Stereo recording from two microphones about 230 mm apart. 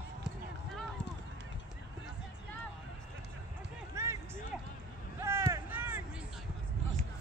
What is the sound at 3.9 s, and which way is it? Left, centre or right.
Music, centre.